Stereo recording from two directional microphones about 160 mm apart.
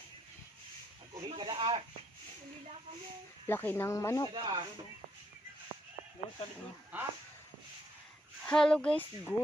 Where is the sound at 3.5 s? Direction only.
10° left (ahead or behind).